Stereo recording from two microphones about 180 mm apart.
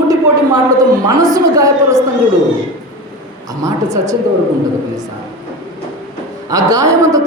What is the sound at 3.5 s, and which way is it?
Speech, 20° right (ahead or behind).